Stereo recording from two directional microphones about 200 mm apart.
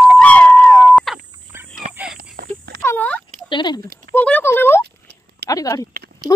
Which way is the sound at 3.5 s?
20° left (ahead or behind).